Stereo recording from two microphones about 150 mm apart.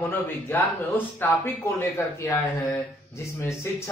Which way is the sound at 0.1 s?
15° left (ahead or behind).